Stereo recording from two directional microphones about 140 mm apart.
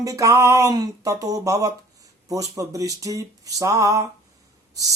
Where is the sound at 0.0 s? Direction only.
25° right (ahead or behind).